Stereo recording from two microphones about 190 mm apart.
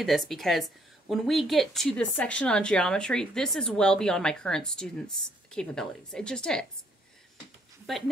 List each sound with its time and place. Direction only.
0.0 s a woman's voice: centre (ahead or behind)
7.9 s a woman's voice: centre (ahead or behind)